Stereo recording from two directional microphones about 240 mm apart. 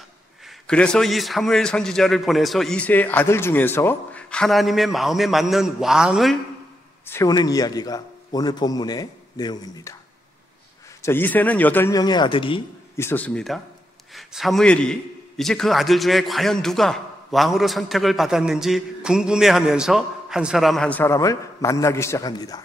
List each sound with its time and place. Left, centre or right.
0.7 s a man's voice: centre
7.1 s a man's voice: centre
11.0 s a man's voice: centre
12.9 s a man's voice: centre